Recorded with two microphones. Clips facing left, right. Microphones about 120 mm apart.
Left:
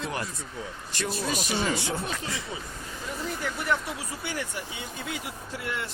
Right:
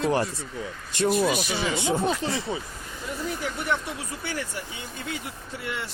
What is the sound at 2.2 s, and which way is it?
Speech, 30° right (ahead or behind).